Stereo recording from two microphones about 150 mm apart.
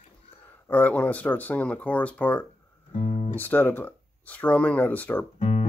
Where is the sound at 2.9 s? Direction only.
45° left (ahead or behind).